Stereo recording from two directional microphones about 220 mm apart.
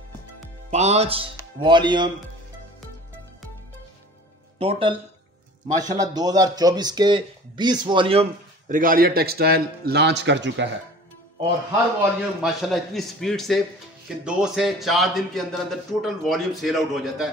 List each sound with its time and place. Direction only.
0.7 s speech: 30° right (ahead or behind)
4.6 s a man's voice: 25° right (ahead or behind)
6.1 s a man's voice: 15° right (ahead or behind); by 10.7 s 55° right (ahead or behind)
12.0 s a man's voice: centre (ahead or behind)